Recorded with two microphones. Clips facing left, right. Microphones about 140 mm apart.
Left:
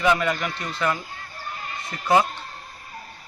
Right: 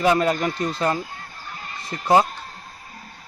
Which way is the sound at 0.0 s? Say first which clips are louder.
Right 3 dB; 35° right (ahead or behind).